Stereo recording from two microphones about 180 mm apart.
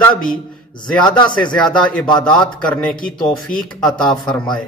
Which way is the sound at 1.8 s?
5° left (ahead or behind).